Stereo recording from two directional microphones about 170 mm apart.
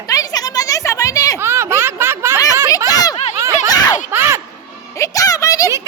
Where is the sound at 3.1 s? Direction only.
40° left (ahead or behind).